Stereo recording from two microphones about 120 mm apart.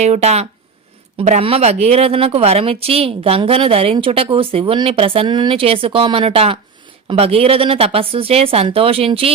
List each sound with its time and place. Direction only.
0.0 s speech: 65° right (ahead or behind)
1.4 s speech: 55° right (ahead or behind)